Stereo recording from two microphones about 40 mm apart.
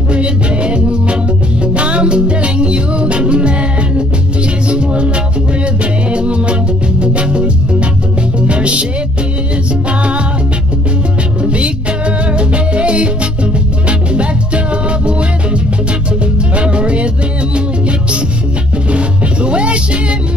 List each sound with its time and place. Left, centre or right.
0.1 s music: right
4.6 s music: right
9.8 s music: right
11.4 s music: right